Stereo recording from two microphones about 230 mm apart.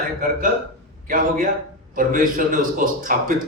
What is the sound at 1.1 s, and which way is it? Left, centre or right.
A man's voice, right.